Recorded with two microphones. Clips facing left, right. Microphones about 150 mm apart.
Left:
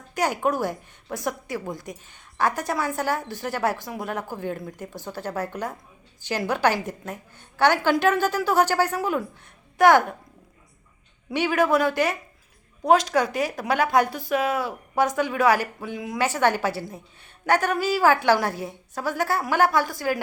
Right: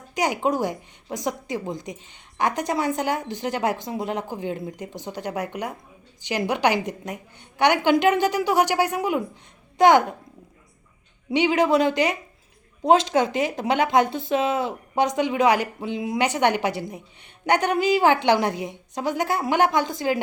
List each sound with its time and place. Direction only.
0.1 s a woman's voice: 15° right (ahead or behind)
11.3 s speech: 20° right (ahead or behind)